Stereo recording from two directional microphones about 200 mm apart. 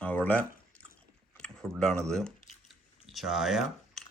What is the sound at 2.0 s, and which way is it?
Speech, 5° left (ahead or behind).